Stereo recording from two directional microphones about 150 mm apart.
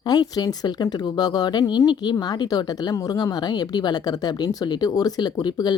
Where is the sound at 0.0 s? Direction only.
25° left (ahead or behind).